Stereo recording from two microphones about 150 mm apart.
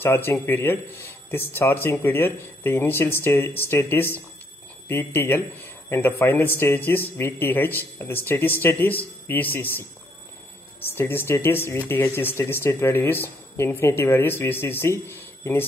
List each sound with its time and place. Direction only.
0.0 s speech: 15° left (ahead or behind)
11.0 s speech: 15° left (ahead or behind)